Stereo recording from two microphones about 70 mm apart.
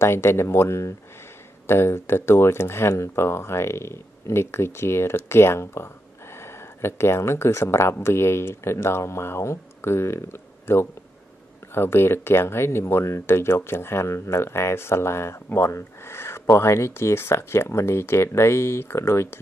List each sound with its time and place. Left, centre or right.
0.0 s speech: left